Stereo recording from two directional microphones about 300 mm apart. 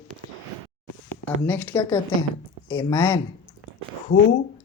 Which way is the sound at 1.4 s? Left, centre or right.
Centre.